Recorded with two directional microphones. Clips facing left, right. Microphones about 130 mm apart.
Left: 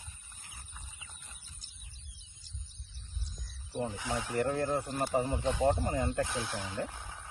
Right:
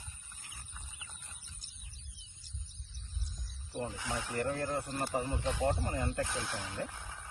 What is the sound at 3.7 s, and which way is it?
Speech, 20° left (ahead or behind).